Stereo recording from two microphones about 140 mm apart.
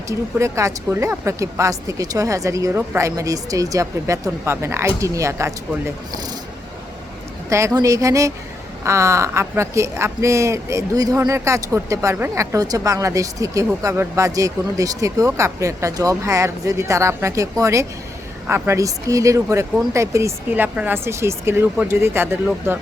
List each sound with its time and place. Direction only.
0.1 s speech: 20° right (ahead or behind)
7.5 s speech: 25° right (ahead or behind)